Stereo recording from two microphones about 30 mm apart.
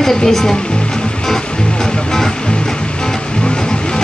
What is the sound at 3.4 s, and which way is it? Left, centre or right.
Vehicle, left.